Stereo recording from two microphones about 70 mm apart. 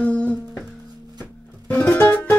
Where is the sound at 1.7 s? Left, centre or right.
Left.